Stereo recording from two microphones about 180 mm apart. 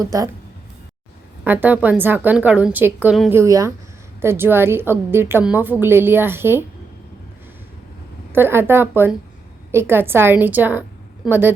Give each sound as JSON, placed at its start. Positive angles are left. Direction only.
{"t": 0.0, "sound": "speech", "side_deg": -20}
{"t": 1.5, "sound": "a woman's voice", "side_deg": -10}
{"t": 8.3, "sound": "a woman's voice", "side_deg": -10}